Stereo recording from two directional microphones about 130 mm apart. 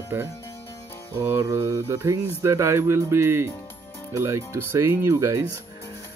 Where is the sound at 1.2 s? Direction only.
20° right (ahead or behind).